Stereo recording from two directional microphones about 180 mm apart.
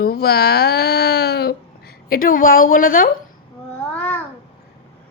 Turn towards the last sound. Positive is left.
turn(degrees=5)  # may be behind; listen again after turning